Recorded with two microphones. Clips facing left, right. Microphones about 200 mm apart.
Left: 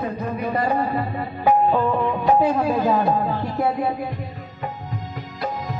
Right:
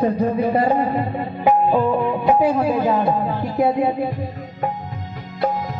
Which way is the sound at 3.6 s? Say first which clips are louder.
Right 6 dB; 20° right (ahead or behind).